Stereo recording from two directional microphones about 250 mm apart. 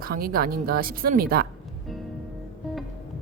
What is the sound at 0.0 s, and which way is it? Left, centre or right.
A woman's voice, right.